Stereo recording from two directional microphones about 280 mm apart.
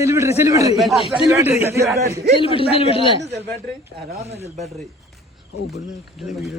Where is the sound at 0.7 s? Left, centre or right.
Centre.